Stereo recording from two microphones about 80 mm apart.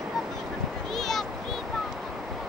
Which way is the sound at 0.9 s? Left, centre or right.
Centre.